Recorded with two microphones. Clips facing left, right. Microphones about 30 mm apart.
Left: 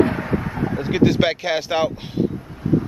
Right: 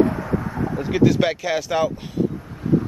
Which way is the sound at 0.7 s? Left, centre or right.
Left.